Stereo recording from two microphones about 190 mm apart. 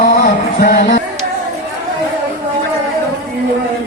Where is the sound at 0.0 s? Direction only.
45° left (ahead or behind).